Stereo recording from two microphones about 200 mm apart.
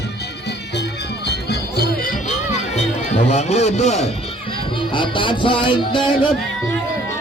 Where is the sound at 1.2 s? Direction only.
55° left (ahead or behind); by 6.3 s 25° left (ahead or behind).